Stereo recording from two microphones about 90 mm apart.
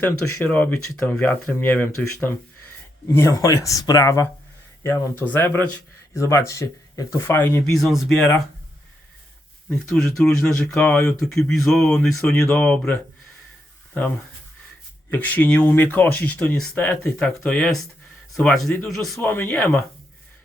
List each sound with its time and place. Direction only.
0.0 s speech: 20° left (ahead or behind)
3.2 s speech: 35° left (ahead or behind)
6.1 s speech: 35° left (ahead or behind)
7.3 s speech: 25° left (ahead or behind)
7.6 s speech: centre (ahead or behind)
9.6 s speech: 5° left (ahead or behind)
15.1 s speech: 20° left (ahead or behind)
17.2 s speech: 10° left (ahead or behind)
19.2 s speech: 20° left (ahead or behind)